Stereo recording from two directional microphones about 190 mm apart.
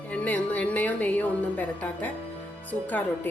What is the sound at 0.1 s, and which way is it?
A woman's voice, 10° left (ahead or behind).